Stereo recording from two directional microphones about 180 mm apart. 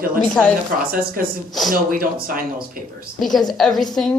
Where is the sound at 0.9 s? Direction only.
55° right (ahead or behind).